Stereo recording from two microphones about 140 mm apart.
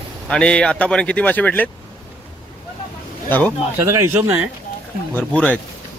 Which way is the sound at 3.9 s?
20° right (ahead or behind).